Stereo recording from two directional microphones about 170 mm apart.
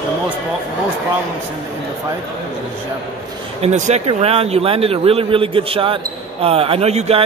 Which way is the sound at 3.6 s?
40° right (ahead or behind).